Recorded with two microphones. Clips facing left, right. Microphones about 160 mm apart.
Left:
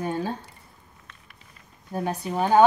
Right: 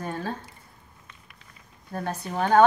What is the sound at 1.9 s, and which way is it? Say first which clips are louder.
Speech: left 3 dB; 10° left (ahead or behind).